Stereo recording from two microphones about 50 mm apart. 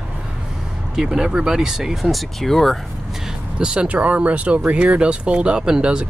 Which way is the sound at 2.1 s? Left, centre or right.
Centre.